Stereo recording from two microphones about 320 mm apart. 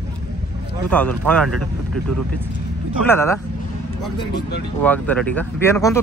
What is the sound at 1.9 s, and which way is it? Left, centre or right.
Speech, right.